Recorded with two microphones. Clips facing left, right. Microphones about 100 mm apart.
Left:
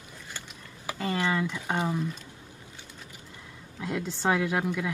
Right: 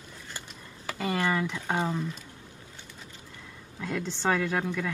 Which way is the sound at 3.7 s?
15° left (ahead or behind).